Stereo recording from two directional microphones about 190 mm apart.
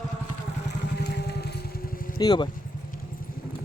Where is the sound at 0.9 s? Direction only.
60° left (ahead or behind).